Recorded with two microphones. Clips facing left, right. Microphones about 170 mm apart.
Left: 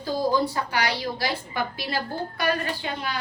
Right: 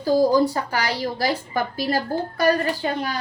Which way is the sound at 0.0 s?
40° right (ahead or behind).